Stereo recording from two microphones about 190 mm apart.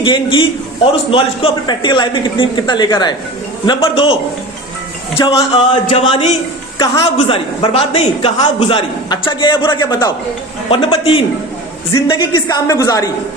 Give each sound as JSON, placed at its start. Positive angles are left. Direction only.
{"t": 0.0, "sound": "a man's voice", "side_deg": 25}
{"t": 6.7, "sound": "a woman's voice", "side_deg": 20}
{"t": 7.2, "sound": "a man's voice", "side_deg": 30}
{"t": 11.9, "sound": "a man's voice", "side_deg": 20}